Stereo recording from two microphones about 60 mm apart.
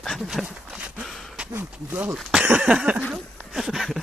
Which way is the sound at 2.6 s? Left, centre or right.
Centre.